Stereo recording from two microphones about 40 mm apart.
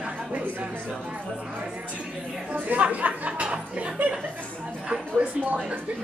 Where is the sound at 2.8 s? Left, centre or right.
Right.